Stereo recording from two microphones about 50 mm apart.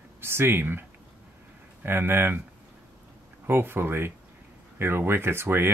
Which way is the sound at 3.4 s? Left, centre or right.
Right.